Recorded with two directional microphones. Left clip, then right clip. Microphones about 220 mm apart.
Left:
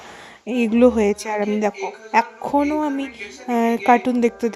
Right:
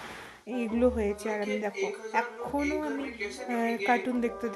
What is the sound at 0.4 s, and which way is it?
Speech, 40° left (ahead or behind).